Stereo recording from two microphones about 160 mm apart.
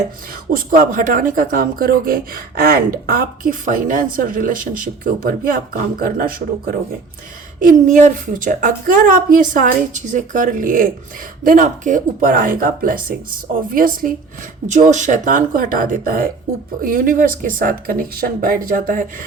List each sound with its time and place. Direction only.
0.5 s speech: 60° right (ahead or behind)
7.6 s speech: 50° right (ahead or behind)